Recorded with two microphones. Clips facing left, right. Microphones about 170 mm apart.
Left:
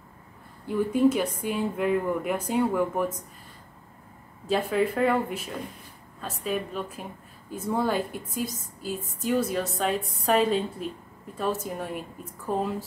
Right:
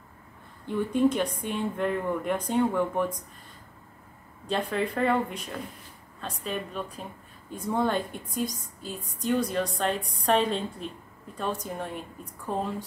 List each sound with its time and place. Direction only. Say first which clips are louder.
0.7 s speech: left 2 dB; 5° left (ahead or behind)
4.5 s speech: left 4 dB; 5° left (ahead or behind)